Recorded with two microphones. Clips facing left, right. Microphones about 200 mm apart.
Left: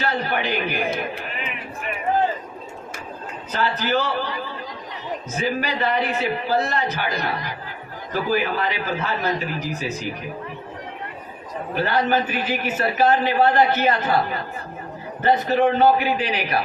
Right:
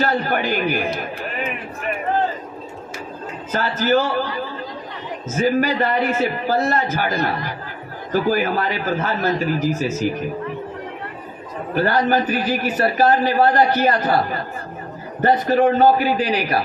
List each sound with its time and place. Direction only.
0.0 s a man's voice: 45° right (ahead or behind)
3.5 s speech: 45° right (ahead or behind)
8.1 s speech: 40° right (ahead or behind)
11.7 s a man's voice: 45° right (ahead or behind)